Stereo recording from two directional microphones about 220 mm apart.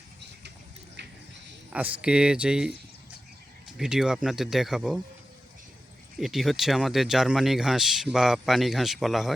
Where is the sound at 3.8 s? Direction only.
5° right (ahead or behind).